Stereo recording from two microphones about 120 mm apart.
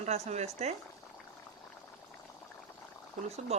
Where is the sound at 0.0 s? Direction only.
70° right (ahead or behind).